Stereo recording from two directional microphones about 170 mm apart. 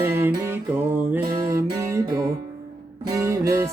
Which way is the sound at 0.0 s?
15° right (ahead or behind).